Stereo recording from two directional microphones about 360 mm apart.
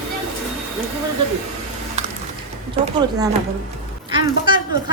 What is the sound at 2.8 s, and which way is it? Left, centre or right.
A woman's voice, centre.